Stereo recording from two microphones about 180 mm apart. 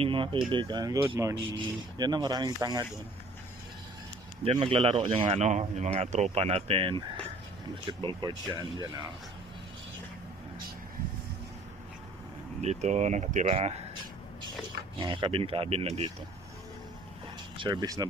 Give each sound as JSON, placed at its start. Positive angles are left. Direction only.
{"t": 0.0, "sound": "speech", "side_deg": -30}
{"t": 4.5, "sound": "speech", "side_deg": -30}
{"t": 8.0, "sound": "speech", "side_deg": -25}
{"t": 12.6, "sound": "speech", "side_deg": -40}
{"t": 15.0, "sound": "speech", "side_deg": -25}
{"t": 17.6, "sound": "speech", "side_deg": -25}